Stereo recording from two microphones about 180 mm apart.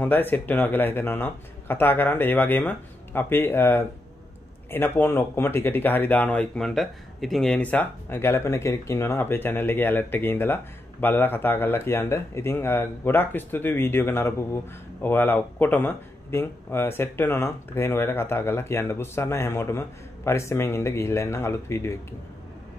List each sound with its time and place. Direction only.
0.0 s speech: 10° left (ahead or behind)